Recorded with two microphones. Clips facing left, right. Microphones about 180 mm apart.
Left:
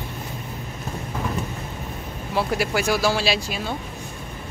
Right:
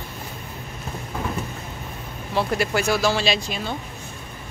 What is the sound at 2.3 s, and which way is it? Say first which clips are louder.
Speech: right 1 dB; 10° left (ahead or behind).